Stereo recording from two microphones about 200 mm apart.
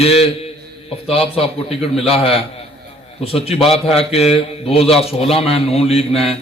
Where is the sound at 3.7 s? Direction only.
30° left (ahead or behind).